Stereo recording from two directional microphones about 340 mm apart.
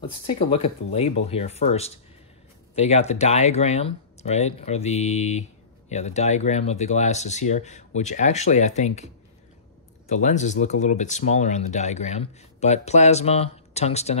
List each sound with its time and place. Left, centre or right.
0.4 s speech: centre